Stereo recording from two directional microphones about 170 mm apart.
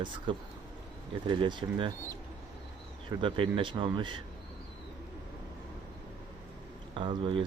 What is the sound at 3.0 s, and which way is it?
Speech, 30° right (ahead or behind).